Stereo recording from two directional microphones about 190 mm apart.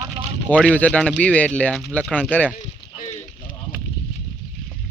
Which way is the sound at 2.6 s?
40° left (ahead or behind).